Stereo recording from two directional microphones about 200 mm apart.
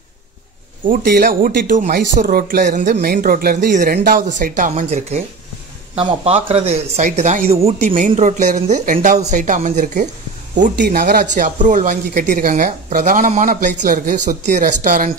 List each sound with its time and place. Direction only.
0.8 s speech: 45° right (ahead or behind)
10.8 s speech: 50° right (ahead or behind)